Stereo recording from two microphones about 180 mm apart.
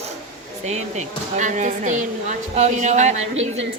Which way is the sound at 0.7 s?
40° right (ahead or behind).